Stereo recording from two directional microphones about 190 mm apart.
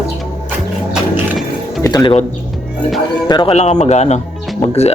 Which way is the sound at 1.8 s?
20° left (ahead or behind).